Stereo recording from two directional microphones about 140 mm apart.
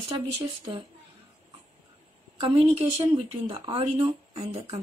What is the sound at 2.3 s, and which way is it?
A woman's voice, 45° right (ahead or behind).